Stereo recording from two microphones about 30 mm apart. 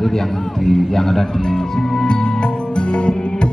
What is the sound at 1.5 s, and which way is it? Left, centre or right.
Music, left.